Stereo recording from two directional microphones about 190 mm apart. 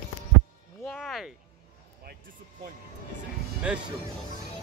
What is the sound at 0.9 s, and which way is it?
Speech, centre (ahead or behind).